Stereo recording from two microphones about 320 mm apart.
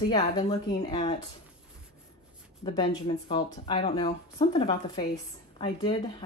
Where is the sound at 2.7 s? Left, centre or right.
Centre.